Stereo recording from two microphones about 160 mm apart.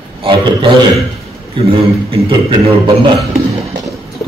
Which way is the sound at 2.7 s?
40° right (ahead or behind).